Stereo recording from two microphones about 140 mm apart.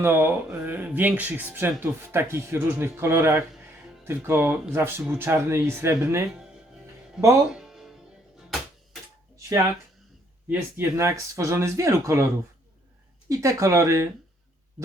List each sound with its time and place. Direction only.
0.0 s speech: 15° right (ahead or behind)
7.5 s music: 5° right (ahead or behind)
10.5 s speech: 15° right (ahead or behind)
13.2 s speech: 25° right (ahead or behind)